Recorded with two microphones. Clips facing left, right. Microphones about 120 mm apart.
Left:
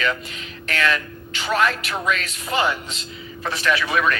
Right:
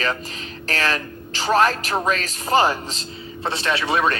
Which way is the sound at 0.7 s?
35° right (ahead or behind).